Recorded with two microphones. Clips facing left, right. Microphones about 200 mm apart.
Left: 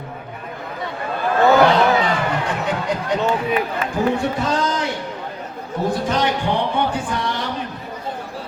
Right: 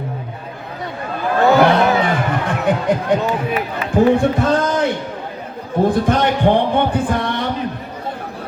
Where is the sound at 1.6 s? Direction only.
55° right (ahead or behind).